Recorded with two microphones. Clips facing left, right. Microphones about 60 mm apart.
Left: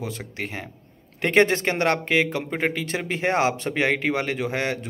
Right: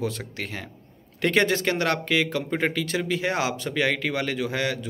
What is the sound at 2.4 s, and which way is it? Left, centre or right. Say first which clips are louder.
Speech: even; centre.